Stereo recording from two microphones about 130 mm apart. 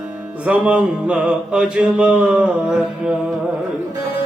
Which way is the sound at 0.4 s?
10° right (ahead or behind).